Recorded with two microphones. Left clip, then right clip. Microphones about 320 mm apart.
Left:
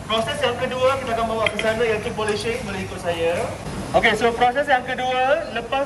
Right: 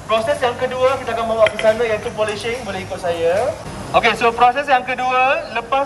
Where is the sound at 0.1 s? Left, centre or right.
Right.